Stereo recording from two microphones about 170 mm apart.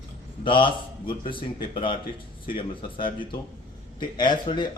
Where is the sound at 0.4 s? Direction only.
30° left (ahead or behind).